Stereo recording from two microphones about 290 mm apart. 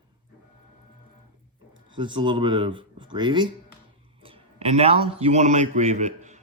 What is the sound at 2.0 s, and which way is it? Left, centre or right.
A man's voice, centre.